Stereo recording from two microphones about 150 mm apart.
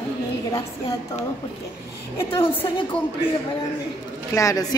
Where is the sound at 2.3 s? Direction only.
35° left (ahead or behind).